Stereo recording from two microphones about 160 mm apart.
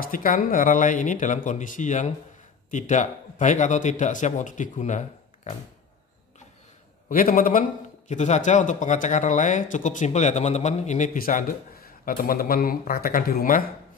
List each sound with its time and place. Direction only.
0.0 s speech: 60° left (ahead or behind)
7.1 s a man's voice: 60° left (ahead or behind)
8.1 s speech: 45° left (ahead or behind); by 13.7 s 65° left (ahead or behind)